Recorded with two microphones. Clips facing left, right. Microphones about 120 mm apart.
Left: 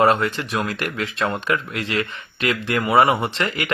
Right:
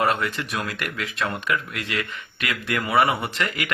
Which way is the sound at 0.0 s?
30° left (ahead or behind).